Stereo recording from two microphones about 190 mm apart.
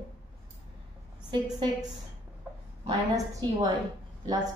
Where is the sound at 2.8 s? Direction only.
20° right (ahead or behind).